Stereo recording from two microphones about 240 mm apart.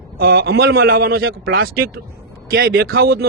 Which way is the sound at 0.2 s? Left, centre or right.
Right.